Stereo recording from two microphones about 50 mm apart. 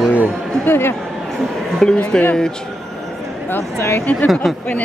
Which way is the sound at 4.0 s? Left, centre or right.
Left.